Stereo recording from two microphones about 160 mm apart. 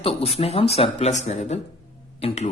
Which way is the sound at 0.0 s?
40° left (ahead or behind).